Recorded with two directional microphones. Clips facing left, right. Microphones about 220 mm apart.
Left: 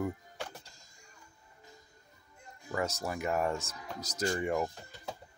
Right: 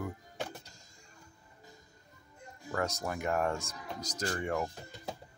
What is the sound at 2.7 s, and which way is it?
Speech, 5° left (ahead or behind).